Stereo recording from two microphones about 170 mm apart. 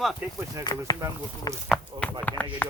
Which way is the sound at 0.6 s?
20° left (ahead or behind).